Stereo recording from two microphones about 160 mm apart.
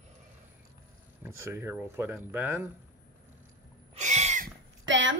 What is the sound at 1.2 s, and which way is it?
Speech, 15° right (ahead or behind).